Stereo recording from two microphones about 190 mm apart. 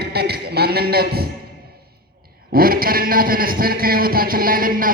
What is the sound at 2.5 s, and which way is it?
A man's voice, 50° right (ahead or behind).